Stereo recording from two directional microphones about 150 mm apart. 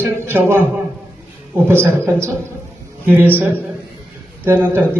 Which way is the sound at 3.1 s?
15° right (ahead or behind).